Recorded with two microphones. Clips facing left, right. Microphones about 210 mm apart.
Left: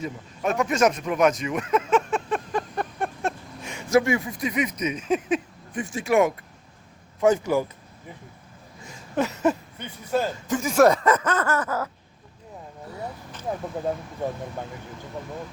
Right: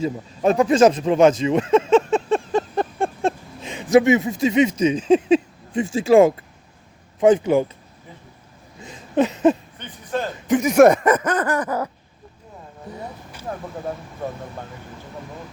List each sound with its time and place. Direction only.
0.0 s a sound: 30° right (ahead or behind)
7.2 s a man's voice: 20° right (ahead or behind)
8.8 s a sound: 20° right (ahead or behind)
9.8 s speech: 10° left (ahead or behind)
10.4 s speech: 20° right (ahead or behind)
12.9 s vehicle: 20° right (ahead or behind)
13.5 s speech: 10° left (ahead or behind)